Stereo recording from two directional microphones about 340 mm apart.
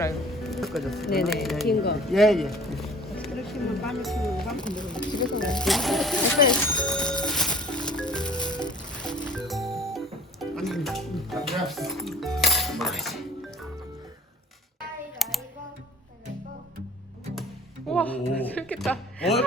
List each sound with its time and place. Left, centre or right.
0.0 s music: centre
1.2 s speech: centre
1.6 s speech: left
2.0 s speech: centre
6.7 s music: centre
15.2 s typing: centre
17.8 s music: centre
18.5 s speech: centre